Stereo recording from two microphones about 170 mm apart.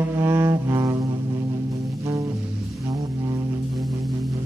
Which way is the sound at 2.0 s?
20° right (ahead or behind).